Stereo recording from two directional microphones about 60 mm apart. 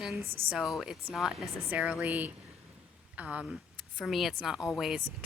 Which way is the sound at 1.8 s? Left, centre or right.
Right.